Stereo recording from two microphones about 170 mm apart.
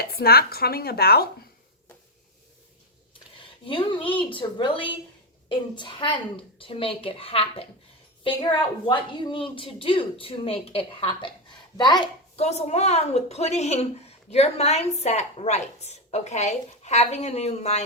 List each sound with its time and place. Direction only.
0.0 s speech: 65° left (ahead or behind)
3.7 s a woman's voice: 30° left (ahead or behind)
12.4 s a woman's voice: 40° left (ahead or behind)